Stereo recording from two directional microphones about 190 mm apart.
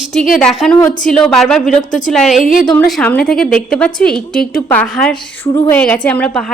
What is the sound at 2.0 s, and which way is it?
A woman's voice, centre (ahead or behind).